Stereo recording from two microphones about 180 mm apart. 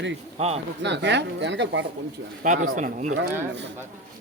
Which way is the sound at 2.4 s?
45° right (ahead or behind).